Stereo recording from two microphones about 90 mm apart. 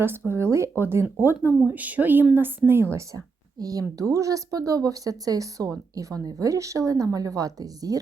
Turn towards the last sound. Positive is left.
turn(degrees=-45)  # may be behind; listen again after turning